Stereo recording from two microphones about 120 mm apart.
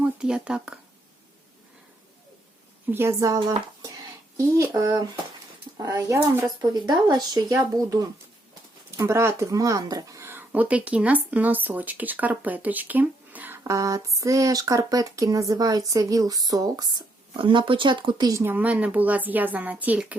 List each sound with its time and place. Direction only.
0.0 s speech: 5° right (ahead or behind)
2.9 s speech: 20° right (ahead or behind)
6.6 s speech: 35° right (ahead or behind); by 13.6 s 15° right (ahead or behind)
13.7 s speech: 25° right (ahead or behind)
17.3 s speech: 45° right (ahead or behind)
18.3 s speech: 25° right (ahead or behind)
18.5 s speech: 10° right (ahead or behind)